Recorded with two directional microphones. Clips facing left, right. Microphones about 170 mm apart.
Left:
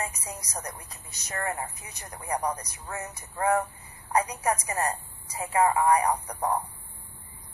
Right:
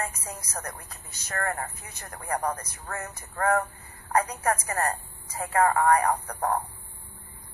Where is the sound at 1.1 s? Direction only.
15° left (ahead or behind).